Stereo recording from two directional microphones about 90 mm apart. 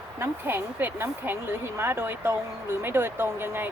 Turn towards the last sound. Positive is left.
turn(degrees=-25)  # may be behind; listen again after turning